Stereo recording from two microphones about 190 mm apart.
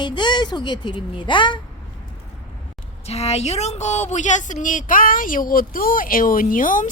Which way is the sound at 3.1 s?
35° left (ahead or behind).